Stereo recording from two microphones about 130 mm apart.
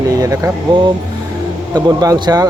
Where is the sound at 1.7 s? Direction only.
30° right (ahead or behind).